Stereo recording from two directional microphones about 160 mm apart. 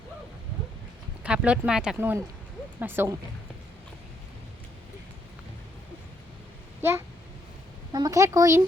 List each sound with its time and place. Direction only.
1.2 s speech: 5° right (ahead or behind)
2.0 s speech: 15° right (ahead or behind)
7.9 s speech: 20° right (ahead or behind)